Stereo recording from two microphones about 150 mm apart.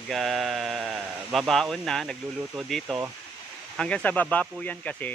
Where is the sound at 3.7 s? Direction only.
10° left (ahead or behind).